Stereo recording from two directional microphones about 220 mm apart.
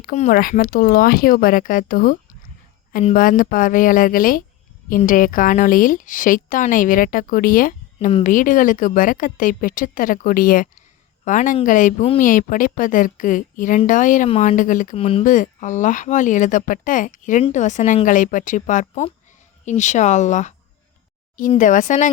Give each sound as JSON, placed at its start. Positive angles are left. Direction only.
{"t": 0.0, "sound": "a woman's voice", "side_deg": 35}
{"t": 21.5, "sound": "a woman's voice", "side_deg": 35}